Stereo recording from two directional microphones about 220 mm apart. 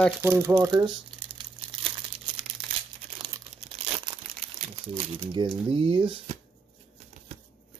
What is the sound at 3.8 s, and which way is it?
Crumpling, 25° right (ahead or behind).